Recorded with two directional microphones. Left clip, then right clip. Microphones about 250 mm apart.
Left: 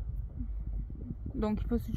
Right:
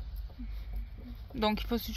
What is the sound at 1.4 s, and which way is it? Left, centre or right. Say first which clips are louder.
Speech: right 4 dB; centre.